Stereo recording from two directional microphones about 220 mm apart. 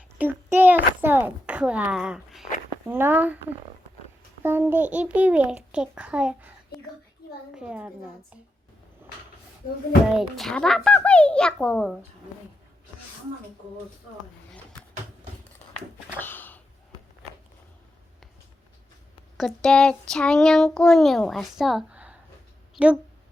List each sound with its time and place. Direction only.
0.2 s a sound: 10° right (ahead or behind)
4.4 s speech: 10° right (ahead or behind)
7.5 s speech: 5° right (ahead or behind)
10.1 s speech: centre (ahead or behind)
16.1 s a sound: 10° left (ahead or behind)
19.4 s speech: centre (ahead or behind)